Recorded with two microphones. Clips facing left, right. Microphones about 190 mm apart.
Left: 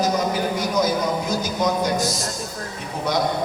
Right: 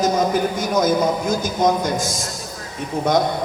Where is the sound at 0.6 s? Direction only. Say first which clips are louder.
Right 4 dB; 50° right (ahead or behind).